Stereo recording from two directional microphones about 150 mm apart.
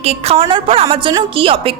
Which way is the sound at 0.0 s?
40° right (ahead or behind).